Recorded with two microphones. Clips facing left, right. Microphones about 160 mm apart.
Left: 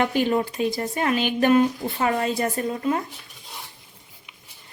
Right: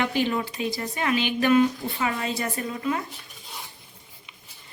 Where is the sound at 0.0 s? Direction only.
45° left (ahead or behind).